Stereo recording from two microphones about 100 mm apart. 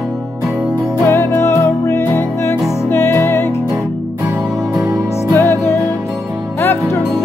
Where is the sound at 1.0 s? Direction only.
25° left (ahead or behind).